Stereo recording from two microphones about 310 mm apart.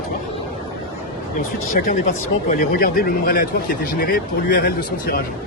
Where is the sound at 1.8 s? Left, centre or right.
Left.